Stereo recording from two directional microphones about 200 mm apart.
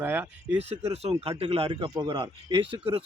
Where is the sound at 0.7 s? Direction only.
30° right (ahead or behind).